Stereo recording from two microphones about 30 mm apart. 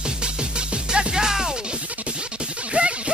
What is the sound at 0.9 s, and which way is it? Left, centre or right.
Music, right.